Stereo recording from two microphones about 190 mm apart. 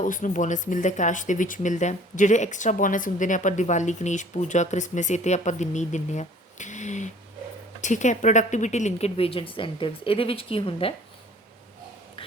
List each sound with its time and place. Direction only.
0.0 s speech: 45° left (ahead or behind)